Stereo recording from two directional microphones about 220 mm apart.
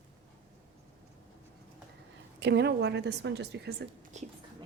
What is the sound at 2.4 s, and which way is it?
A woman's voice, 50° right (ahead or behind).